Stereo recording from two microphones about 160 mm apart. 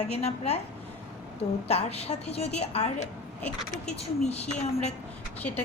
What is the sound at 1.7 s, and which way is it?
A woman's voice, 40° left (ahead or behind).